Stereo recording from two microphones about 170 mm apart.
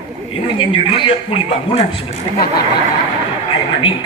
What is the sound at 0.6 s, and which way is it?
Speech, 30° left (ahead or behind).